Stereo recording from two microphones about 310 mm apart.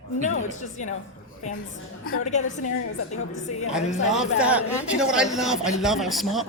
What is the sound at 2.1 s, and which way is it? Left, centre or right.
Speech, left.